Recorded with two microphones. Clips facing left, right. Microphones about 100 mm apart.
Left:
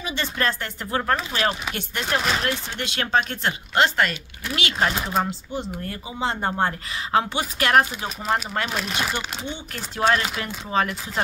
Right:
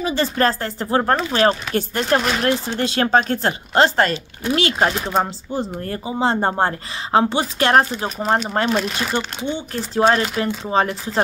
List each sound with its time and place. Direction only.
0.0 s speech: 35° right (ahead or behind)
8.6 s speech: 5° left (ahead or behind)
9.1 s speech: 30° right (ahead or behind)